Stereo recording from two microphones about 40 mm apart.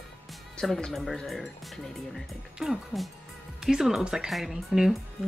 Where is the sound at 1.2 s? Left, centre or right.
Centre.